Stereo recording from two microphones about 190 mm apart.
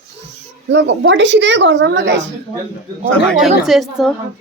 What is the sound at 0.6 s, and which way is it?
Speech, 70° right (ahead or behind).